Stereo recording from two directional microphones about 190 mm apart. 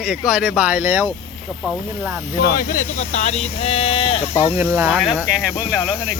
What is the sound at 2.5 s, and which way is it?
Speech, 45° left (ahead or behind).